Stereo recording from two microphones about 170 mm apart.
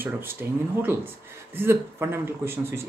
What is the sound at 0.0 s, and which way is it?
Speech, 10° right (ahead or behind).